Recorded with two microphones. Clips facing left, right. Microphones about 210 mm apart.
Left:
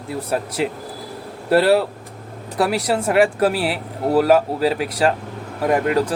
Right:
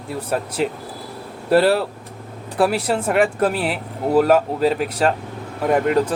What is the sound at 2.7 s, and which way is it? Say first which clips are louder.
Speech: left 1 dB; centre (ahead or behind).